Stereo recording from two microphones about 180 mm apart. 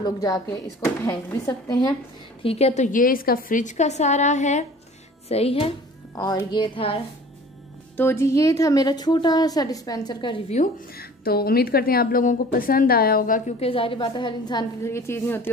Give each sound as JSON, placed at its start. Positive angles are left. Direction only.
{"t": 0.0, "sound": "a woman's voice", "side_deg": 20}
{"t": 2.4, "sound": "a woman's voice", "side_deg": 35}
{"t": 6.1, "sound": "a woman's voice", "side_deg": 20}
{"t": 7.9, "sound": "a woman's voice", "side_deg": 10}
{"t": 11.0, "sound": "a woman's voice", "side_deg": 55}
{"t": 13.6, "sound": "a woman's voice", "side_deg": 30}